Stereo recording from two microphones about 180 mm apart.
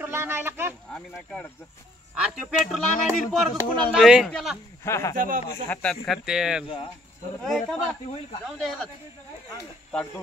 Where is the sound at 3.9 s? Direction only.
5° right (ahead or behind).